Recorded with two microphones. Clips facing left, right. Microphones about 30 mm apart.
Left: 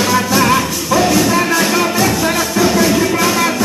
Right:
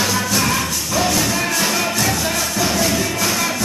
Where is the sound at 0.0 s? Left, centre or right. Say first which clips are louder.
Left 6 dB; centre.